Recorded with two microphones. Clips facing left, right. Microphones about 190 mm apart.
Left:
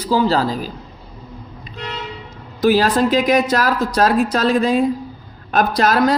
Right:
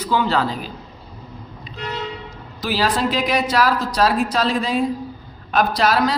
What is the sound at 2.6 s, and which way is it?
Speech, 50° left (ahead or behind).